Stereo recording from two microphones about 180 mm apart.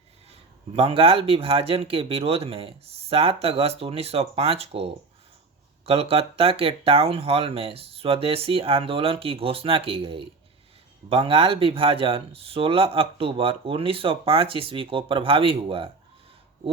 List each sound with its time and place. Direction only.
0.3 s speech: 30° right (ahead or behind)